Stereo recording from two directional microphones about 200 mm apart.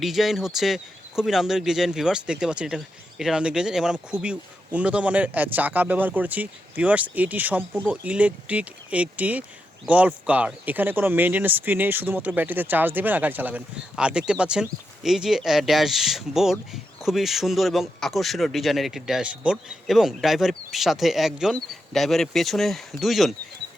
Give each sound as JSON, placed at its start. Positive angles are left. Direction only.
{"t": 0.0, "sound": "speech", "side_deg": 0}